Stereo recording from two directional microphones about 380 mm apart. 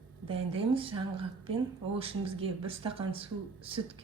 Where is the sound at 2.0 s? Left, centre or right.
Centre.